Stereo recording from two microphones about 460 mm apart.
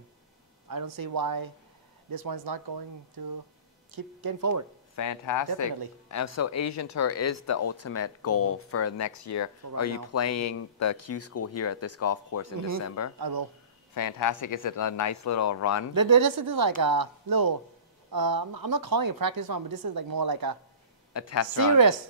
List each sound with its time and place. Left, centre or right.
0.7 s speech: right
3.9 s speech: right
4.9 s speech: left
13.2 s speech: right
13.9 s speech: left
15.9 s speech: right
21.1 s speech: left